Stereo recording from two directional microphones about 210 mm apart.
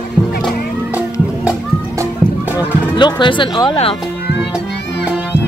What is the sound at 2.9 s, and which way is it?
Speech, 20° left (ahead or behind).